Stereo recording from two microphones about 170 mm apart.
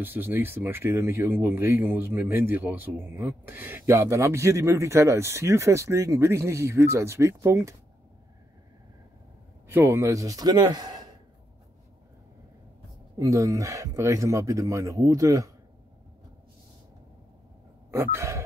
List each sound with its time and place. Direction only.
0.0 s speech: 10° right (ahead or behind)
9.7 s speech: 15° right (ahead or behind)
13.2 s speech: 20° right (ahead or behind)
17.9 s speech: 15° right (ahead or behind)